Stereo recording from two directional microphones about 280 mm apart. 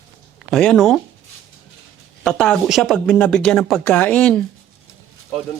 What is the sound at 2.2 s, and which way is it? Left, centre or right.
Speech, centre.